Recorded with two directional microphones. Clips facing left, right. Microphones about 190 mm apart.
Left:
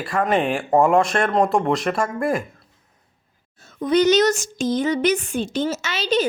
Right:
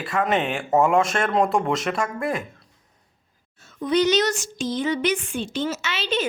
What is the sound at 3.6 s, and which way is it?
A woman's voice, 40° left (ahead or behind).